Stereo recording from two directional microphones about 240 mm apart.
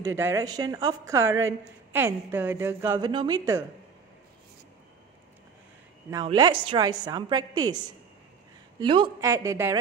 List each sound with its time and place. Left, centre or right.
0.0 s a woman's voice: centre
6.2 s a woman's voice: centre